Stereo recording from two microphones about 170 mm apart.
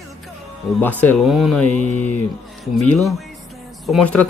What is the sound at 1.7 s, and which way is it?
Speech, 45° left (ahead or behind).